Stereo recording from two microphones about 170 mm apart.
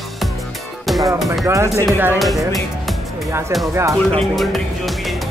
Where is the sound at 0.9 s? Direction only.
Centre (ahead or behind).